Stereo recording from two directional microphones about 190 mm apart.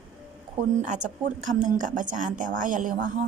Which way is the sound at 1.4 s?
40° right (ahead or behind).